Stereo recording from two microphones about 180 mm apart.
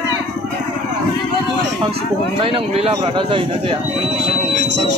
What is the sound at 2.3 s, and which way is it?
A man's voice, 30° right (ahead or behind).